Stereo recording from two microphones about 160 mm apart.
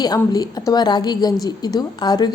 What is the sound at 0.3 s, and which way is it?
A woman's voice, 25° left (ahead or behind).